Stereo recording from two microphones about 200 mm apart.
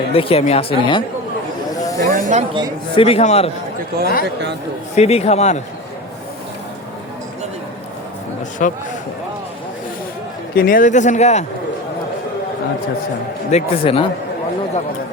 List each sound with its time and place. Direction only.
0.1 s speech: 30° left (ahead or behind)
1.8 s snake: 15° left (ahead or behind)
2.0 s speech: 40° right (ahead or behind)
2.9 s speech: 30° left (ahead or behind)
3.8 s speech: 50° right (ahead or behind)
4.9 s speech: 30° left (ahead or behind)
8.6 s speech: 40° left (ahead or behind)
10.5 s speech: 45° left (ahead or behind)
13.5 s speech: 30° left (ahead or behind)